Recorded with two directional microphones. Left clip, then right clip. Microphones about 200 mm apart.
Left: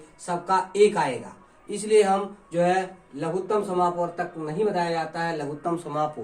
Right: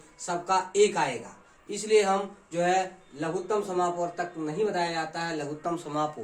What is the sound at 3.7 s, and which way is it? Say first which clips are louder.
Speech: left 4 dB; 25° right (ahead or behind).